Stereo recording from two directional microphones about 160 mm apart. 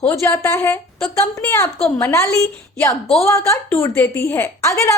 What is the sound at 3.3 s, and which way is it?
A woman's voice, 20° left (ahead or behind).